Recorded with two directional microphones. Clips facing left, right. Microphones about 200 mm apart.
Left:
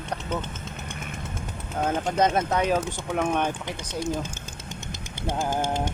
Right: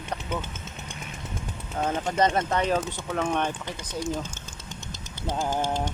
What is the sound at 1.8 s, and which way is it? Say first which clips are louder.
Speech: left 1 dB; centre (ahead or behind).